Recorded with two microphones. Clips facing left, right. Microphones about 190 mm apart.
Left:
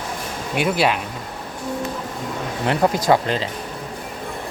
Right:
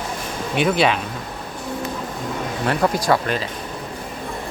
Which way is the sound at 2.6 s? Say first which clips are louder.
Left 2 dB; 20° left (ahead or behind).